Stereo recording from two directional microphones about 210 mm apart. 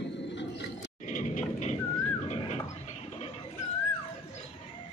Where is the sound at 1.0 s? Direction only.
35° left (ahead or behind).